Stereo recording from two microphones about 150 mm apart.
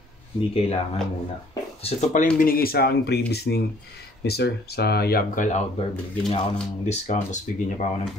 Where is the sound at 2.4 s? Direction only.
80° left; by 5.6 s 60° left (ahead or behind).